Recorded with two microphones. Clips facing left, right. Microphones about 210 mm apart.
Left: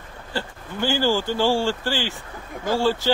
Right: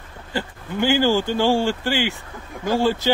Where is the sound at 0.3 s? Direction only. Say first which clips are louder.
Right 3 dB; 15° right (ahead or behind).